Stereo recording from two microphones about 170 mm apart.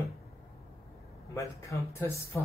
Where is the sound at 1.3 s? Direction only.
15° left (ahead or behind).